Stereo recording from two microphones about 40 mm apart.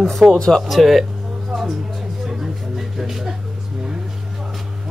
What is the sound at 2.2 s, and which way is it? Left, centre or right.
Music, centre.